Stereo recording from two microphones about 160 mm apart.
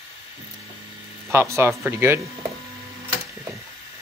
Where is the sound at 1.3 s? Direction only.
15° right (ahead or behind).